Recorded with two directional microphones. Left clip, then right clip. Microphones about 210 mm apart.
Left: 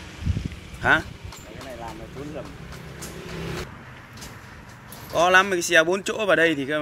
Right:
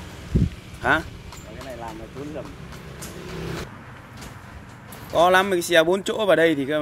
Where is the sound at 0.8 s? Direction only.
5° right (ahead or behind).